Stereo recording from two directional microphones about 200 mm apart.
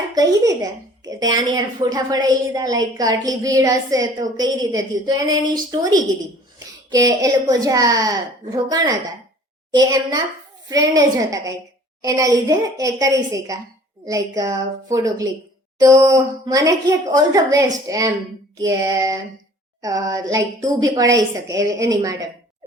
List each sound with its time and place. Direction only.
0.1 s a woman's voice: 20° right (ahead or behind)
7.1 s a woman's voice: 20° right (ahead or behind)